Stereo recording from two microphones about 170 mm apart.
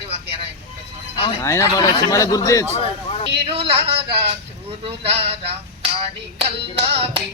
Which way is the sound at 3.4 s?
35° right (ahead or behind).